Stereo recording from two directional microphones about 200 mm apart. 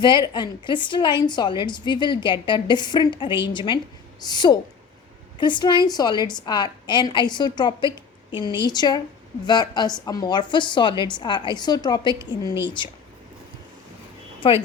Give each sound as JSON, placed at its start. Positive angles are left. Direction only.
{"t": 0.0, "sound": "a woman's voice", "side_deg": 20}
{"t": 14.4, "sound": "a woman's voice", "side_deg": 25}